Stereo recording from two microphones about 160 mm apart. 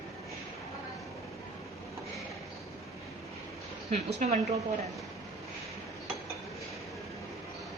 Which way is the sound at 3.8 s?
45° right (ahead or behind).